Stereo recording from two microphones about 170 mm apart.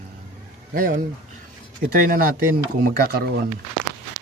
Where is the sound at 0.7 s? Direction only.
55° right (ahead or behind).